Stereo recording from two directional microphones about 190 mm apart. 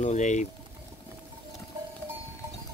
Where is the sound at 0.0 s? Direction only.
40° left (ahead or behind).